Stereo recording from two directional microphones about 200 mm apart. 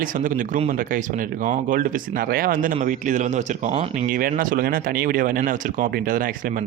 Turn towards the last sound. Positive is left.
turn(degrees=-45)  # may be behind; listen again after turning